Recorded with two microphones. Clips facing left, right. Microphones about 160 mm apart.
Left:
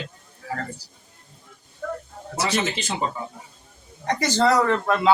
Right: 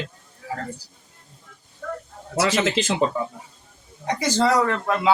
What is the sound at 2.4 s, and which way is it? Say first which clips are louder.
Speech: right 4 dB; 90° right.